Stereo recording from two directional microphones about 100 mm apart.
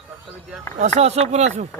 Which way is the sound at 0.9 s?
90° right.